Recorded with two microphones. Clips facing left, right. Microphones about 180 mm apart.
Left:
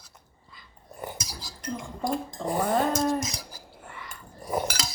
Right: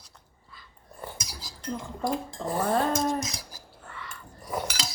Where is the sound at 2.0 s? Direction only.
Centre (ahead or behind).